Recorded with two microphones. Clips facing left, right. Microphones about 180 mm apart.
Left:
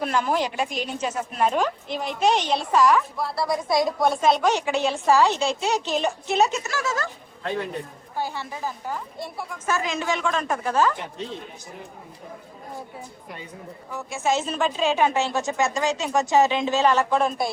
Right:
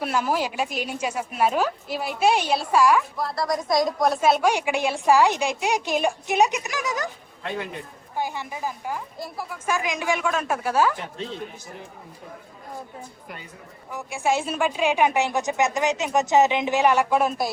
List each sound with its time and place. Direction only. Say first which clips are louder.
0.0 s a woman's voice: left 1 dB; 5° right (ahead or behind)
3.2 s a woman's voice: even; centre (ahead or behind); by 7.1 s 15° right (ahead or behind)
8.1 s a woman's voice: right 1 dB; 15° right (ahead or behind)
9.6 s a woman's voice: even; 15° right (ahead or behind)
13.9 s a woman's voice: even; 15° right (ahead or behind)